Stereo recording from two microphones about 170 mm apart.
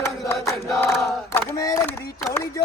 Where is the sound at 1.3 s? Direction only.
20° left (ahead or behind).